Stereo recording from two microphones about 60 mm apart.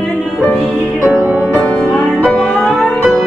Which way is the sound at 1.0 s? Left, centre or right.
Centre.